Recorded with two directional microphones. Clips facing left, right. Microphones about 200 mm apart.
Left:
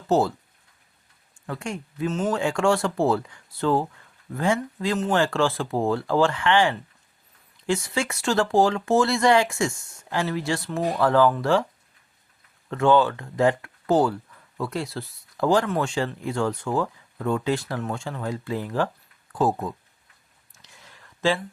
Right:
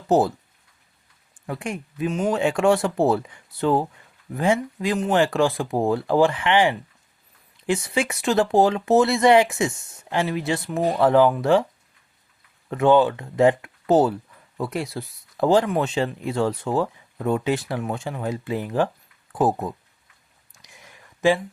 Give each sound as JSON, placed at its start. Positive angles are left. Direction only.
{"t": 0.1, "sound": "speech", "side_deg": -20}
{"t": 1.5, "sound": "speech", "side_deg": -15}
{"t": 12.7, "sound": "speech", "side_deg": -20}
{"t": 20.6, "sound": "a sound", "side_deg": -15}